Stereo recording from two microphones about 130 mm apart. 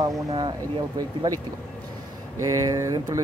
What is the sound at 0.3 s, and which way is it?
Speech, 35° right (ahead or behind).